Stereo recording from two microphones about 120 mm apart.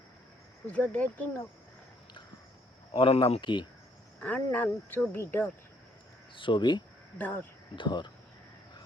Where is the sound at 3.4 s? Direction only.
40° left (ahead or behind).